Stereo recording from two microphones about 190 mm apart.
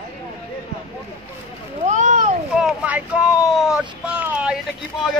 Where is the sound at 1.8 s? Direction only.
40° right (ahead or behind).